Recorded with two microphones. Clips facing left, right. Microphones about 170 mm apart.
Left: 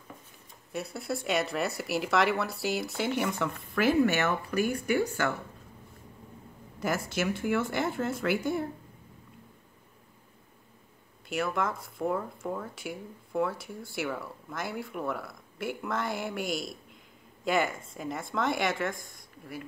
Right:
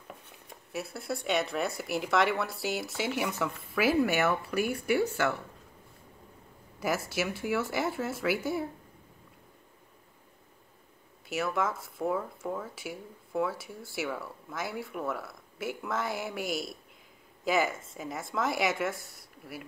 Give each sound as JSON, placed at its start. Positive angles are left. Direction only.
{"t": 0.7, "sound": "speech", "side_deg": 0}
{"t": 6.8, "sound": "speech", "side_deg": -5}
{"t": 11.2, "sound": "speech", "side_deg": 0}